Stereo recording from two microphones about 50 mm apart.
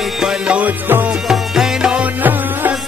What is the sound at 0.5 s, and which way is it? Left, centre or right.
Music, right.